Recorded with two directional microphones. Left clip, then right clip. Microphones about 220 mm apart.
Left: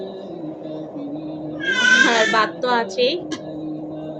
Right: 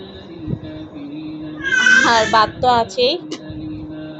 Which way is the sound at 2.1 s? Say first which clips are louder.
Right 3 dB; 5° right (ahead or behind).